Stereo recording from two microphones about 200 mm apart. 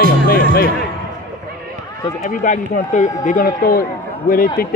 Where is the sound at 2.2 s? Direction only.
40° left (ahead or behind).